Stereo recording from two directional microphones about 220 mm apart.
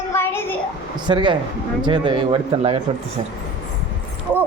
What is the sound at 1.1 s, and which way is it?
A man's voice, 20° right (ahead or behind).